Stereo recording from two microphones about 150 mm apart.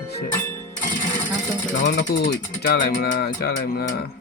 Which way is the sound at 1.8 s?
75° left (ahead or behind).